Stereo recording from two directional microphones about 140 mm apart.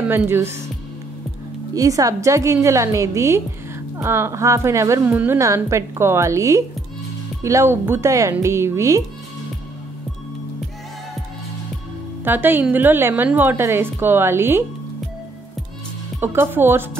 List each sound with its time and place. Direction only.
0.1 s a woman's voice: 15° right (ahead or behind)
1.8 s a woman's voice: 25° right (ahead or behind)
12.3 s a woman's voice: 15° right (ahead or behind)
16.2 s a woman's voice: 15° right (ahead or behind)